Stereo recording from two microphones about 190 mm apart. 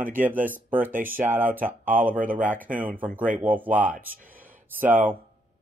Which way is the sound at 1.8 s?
45° right (ahead or behind).